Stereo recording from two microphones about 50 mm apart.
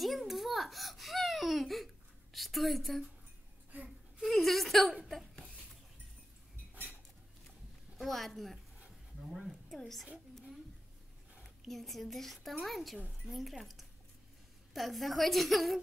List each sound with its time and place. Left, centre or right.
0.0 s a sound: centre
2.3 s a woman's voice: centre
4.2 s a sound: centre
5.0 s laughter: centre
8.0 s a woman's voice: centre
9.3 s a woman's voice: centre
9.7 s a woman's voice: centre
11.4 s a woman's voice: centre